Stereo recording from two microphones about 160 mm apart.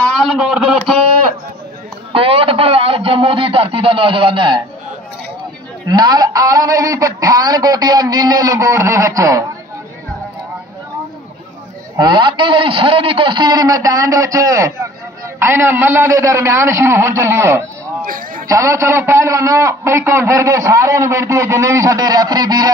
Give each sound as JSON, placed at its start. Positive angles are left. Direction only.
{"t": 0.0, "sound": "a man's voice", "side_deg": 0}
{"t": 2.1, "sound": "a man's voice", "side_deg": -35}
{"t": 5.9, "sound": "a man's voice", "side_deg": -25}
{"t": 12.0, "sound": "a man's voice", "side_deg": -30}
{"t": 18.0, "sound": "a man's voice", "side_deg": -60}
{"t": 18.5, "sound": "a man's voice", "side_deg": -20}